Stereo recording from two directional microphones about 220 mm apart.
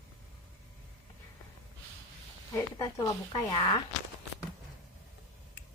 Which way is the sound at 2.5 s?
15° left (ahead or behind).